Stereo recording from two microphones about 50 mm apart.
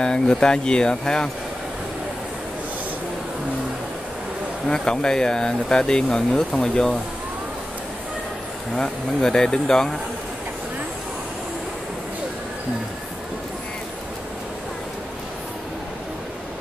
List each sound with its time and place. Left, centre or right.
0.0 s speech: centre
4.6 s speech: centre
8.7 s speech: centre